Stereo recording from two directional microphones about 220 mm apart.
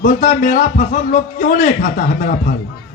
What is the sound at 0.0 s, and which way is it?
A man's voice, 35° left (ahead or behind).